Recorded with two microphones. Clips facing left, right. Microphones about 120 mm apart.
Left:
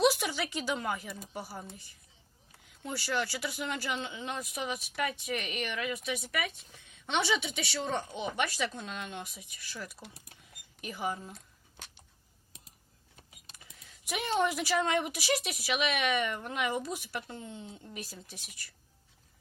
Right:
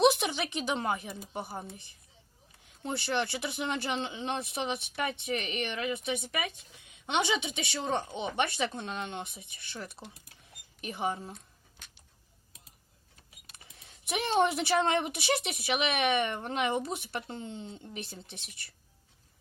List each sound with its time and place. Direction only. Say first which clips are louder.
0.0 s speech: right 2 dB; 25° right (ahead or behind)
13.7 s speech: right 3 dB; 25° right (ahead or behind)